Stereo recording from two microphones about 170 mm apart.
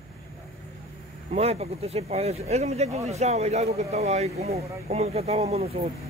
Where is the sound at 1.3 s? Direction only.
40° right (ahead or behind).